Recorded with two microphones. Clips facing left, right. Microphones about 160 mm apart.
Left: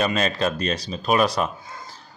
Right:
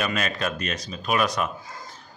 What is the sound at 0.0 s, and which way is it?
A man's voice, 30° left (ahead or behind).